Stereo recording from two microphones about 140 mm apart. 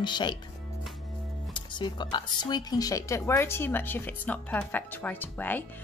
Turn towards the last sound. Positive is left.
turn(degrees=10)  # may be behind; listen again after turning